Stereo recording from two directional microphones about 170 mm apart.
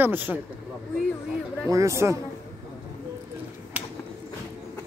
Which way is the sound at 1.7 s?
20° right (ahead or behind).